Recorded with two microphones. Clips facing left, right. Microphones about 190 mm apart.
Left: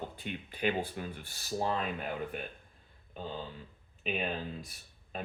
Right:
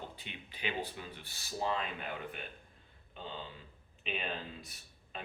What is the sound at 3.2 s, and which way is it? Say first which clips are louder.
Speech: left 5 dB; 40° left (ahead or behind).